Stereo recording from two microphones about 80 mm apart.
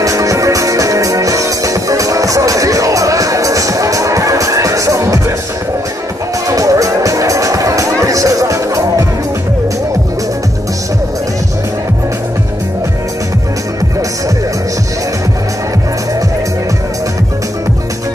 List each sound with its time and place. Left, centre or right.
0.0 s music: right
6.5 s music: right